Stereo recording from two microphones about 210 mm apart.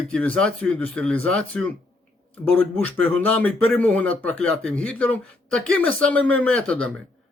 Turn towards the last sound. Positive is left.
turn(degrees=5)  # may be behind; listen again after turning